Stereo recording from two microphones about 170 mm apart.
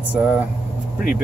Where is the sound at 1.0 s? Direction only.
55° left (ahead or behind).